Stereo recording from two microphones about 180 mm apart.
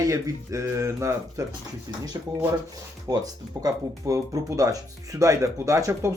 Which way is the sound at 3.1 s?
20° right (ahead or behind).